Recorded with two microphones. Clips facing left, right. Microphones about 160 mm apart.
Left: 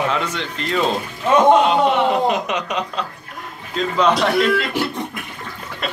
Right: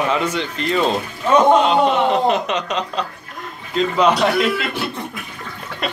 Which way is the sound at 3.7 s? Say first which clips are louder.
Right 1 dB; 5° right (ahead or behind).